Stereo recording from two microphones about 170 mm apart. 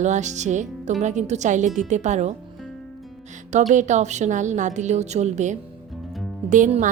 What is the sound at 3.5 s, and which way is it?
Speech, 45° right (ahead or behind).